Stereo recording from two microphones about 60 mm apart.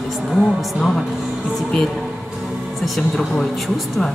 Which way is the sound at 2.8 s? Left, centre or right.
Centre.